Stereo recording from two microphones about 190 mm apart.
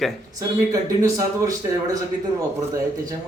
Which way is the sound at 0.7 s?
15° right (ahead or behind).